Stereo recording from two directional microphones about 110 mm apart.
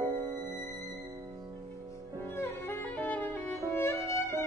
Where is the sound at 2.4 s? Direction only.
20° left (ahead or behind).